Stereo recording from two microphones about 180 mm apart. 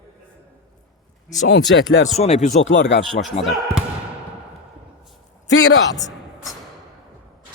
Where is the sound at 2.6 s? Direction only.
80° left.